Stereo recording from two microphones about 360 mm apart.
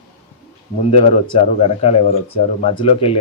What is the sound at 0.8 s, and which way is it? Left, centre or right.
Speech, centre.